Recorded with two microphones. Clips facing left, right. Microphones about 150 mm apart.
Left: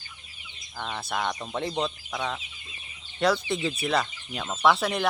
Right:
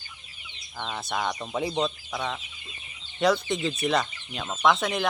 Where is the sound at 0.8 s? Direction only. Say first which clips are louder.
Even; centre (ahead or behind).